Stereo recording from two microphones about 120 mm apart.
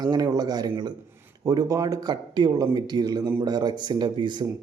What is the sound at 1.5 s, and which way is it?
Speech, 30° right (ahead or behind).